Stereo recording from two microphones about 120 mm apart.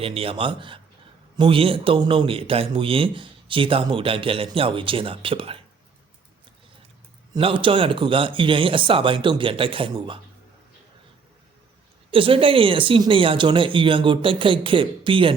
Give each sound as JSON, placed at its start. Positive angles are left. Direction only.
{"t": 0.0, "sound": "a man's voice", "side_deg": -50}
{"t": 7.3, "sound": "a man's voice", "side_deg": -45}
{"t": 12.1, "sound": "a man's voice", "side_deg": -50}